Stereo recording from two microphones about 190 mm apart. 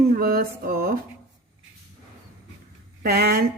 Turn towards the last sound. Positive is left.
turn(degrees=-55)  # may be behind; listen again after turning